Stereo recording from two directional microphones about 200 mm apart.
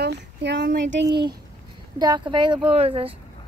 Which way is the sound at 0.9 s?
60° right (ahead or behind).